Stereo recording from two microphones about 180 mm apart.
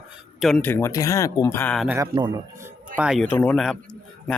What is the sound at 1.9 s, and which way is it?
Speech, 15° right (ahead or behind).